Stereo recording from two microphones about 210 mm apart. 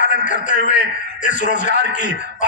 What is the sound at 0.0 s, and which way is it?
A man's voice, 40° left (ahead or behind).